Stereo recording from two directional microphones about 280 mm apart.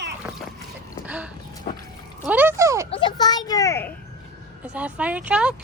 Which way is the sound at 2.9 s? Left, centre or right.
Centre.